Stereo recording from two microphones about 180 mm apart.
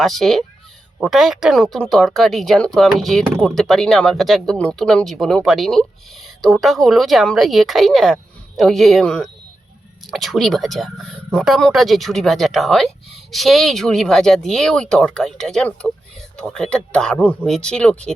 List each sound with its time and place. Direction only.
0.0 s speech: centre (ahead or behind)